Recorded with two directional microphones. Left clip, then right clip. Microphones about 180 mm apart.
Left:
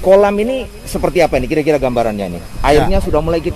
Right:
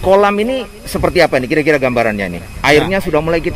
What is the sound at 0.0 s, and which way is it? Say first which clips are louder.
A man's voice: left 1 dB; 10° right (ahead or behind).